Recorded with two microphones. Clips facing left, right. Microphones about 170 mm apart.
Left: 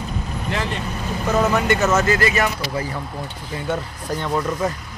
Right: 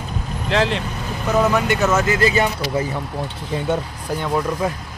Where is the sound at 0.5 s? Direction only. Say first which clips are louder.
Right 7 dB; 90° right.